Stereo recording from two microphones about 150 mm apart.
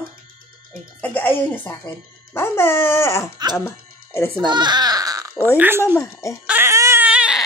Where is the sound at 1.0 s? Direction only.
10° left (ahead or behind).